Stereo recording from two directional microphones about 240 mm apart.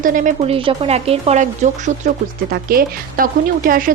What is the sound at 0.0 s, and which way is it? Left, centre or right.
Speech, right.